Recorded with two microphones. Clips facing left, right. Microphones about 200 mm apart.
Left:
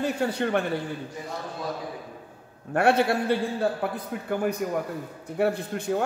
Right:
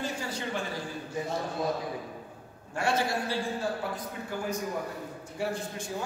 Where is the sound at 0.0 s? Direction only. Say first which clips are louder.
Left 8 dB; 60° left (ahead or behind).